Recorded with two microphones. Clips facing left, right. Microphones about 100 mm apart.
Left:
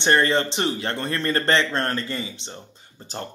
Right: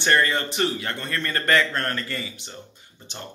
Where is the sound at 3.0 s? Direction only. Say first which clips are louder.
Left 5 dB; 35° left (ahead or behind).